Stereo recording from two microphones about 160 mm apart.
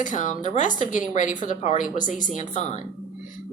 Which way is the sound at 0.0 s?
50° left (ahead or behind).